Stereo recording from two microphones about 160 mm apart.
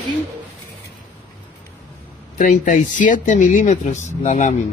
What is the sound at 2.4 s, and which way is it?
Speech, 55° left (ahead or behind).